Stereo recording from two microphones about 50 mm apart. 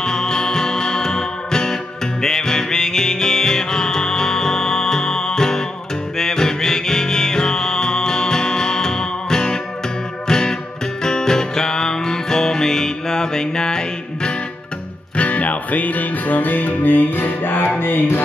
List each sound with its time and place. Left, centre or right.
0.0 s music: centre
15.1 s music: left